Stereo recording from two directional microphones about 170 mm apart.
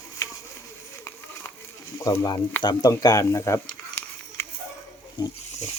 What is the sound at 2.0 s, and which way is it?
Speech, 20° left (ahead or behind).